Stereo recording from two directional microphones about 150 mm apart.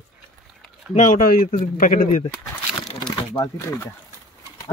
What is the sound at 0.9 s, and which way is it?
Speech, 60° left (ahead or behind).